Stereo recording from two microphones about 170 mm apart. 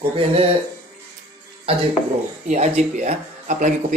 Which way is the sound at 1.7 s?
35° right (ahead or behind).